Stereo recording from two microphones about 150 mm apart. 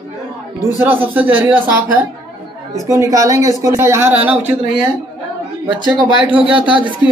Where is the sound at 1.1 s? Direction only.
10° right (ahead or behind).